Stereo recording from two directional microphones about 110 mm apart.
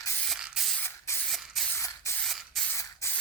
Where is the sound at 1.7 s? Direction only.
25° left (ahead or behind).